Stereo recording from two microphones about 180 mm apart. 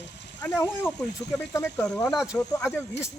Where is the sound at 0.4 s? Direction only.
15° left (ahead or behind).